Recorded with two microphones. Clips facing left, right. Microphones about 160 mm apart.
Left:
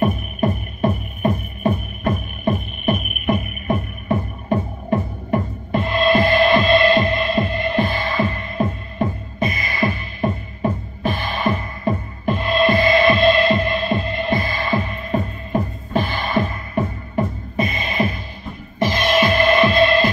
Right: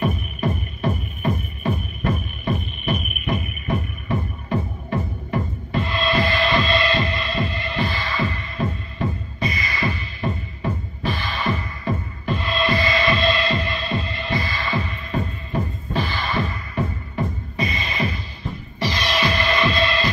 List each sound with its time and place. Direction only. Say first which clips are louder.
0.0 s music: left 4 dB; 50° left (ahead or behind)